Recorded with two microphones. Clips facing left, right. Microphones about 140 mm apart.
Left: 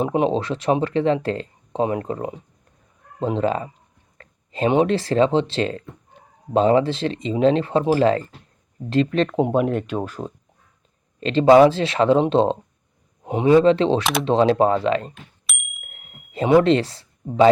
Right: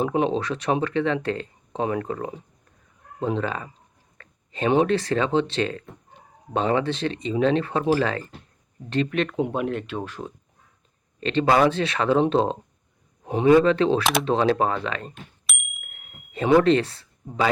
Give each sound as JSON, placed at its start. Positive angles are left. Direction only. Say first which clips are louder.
{"t": 0.0, "sound": "speech", "louder": "left 3 dB", "side_deg": 30}
{"t": 4.2, "sound": "a sound", "louder": "left 4 dB", "side_deg": 35}
{"t": 4.9, "sound": "speech", "louder": "left 4 dB", "side_deg": 30}
{"t": 14.0, "sound": "speech", "louder": "even", "side_deg": 0}
{"t": 14.3, "sound": "speech", "louder": "left 7 dB", "side_deg": 30}
{"t": 15.4, "sound": "bicycle bell", "louder": "even", "side_deg": 0}
{"t": 15.8, "sound": "a sound", "louder": "left 2 dB", "side_deg": 40}
{"t": 16.4, "sound": "speech", "louder": "left 2 dB", "side_deg": 30}